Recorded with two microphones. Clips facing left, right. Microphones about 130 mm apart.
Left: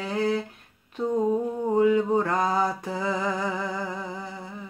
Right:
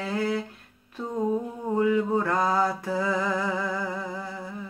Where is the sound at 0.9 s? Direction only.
15° left (ahead or behind).